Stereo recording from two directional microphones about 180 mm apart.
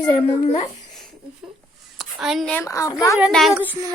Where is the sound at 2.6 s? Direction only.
15° left (ahead or behind).